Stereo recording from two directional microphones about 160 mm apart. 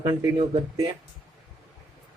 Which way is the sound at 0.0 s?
25° right (ahead or behind).